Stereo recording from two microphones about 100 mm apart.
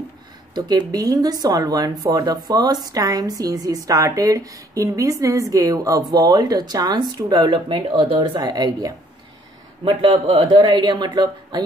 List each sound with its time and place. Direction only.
0.6 s speech: 40° right (ahead or behind); by 8.4 s 65° right (ahead or behind)
8.4 s speech: 45° right (ahead or behind)
9.8 s a man's voice: 70° right (ahead or behind)
10.7 s speech: 50° right (ahead or behind)